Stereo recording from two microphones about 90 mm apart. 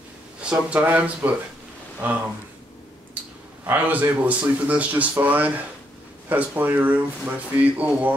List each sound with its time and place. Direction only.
0.4 s speech: 15° right (ahead or behind)
3.2 s clicking: 20° right (ahead or behind)
3.6 s speech: 20° right (ahead or behind)